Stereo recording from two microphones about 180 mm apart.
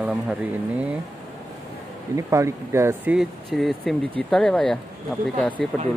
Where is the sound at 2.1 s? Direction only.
15° right (ahead or behind).